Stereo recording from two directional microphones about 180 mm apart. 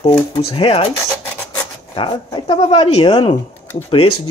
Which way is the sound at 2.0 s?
25° left (ahead or behind).